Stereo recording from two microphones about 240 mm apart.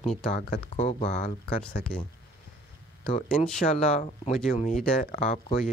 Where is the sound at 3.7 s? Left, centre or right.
Left.